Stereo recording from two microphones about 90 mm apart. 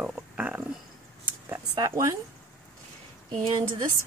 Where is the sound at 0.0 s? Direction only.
15° right (ahead or behind).